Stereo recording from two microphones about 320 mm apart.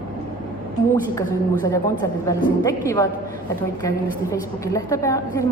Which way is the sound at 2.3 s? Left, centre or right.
Centre.